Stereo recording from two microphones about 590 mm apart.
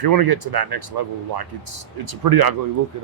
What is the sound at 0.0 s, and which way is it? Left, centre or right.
Speech, right.